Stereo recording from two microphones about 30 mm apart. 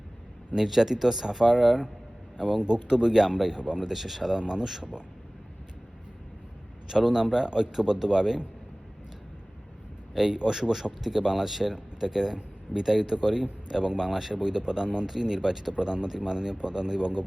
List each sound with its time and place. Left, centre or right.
0.5 s a man's voice: centre
3.6 s a man's voice: right
3.9 s speech: centre
4.4 s a man's voice: right
6.8 s a man's voice: centre
10.2 s a man's voice: right
10.5 s a man's voice: centre